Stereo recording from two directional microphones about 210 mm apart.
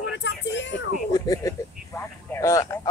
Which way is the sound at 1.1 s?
15° left (ahead or behind).